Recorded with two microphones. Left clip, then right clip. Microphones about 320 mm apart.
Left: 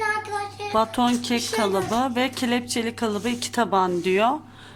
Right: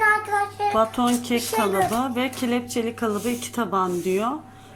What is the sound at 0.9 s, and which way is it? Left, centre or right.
Speech, left.